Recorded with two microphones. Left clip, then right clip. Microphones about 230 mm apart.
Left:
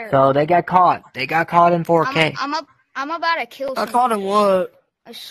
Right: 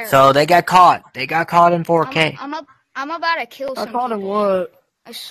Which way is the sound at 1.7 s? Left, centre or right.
Centre.